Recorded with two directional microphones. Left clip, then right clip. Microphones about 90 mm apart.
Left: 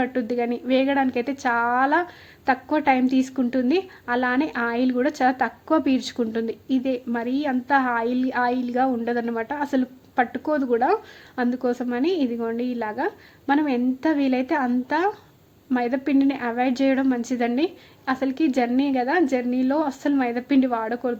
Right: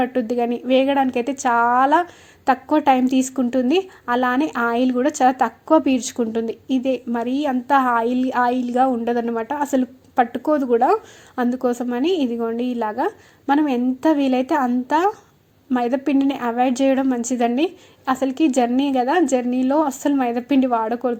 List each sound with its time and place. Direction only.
0.0 s a woman's voice: 25° right (ahead or behind)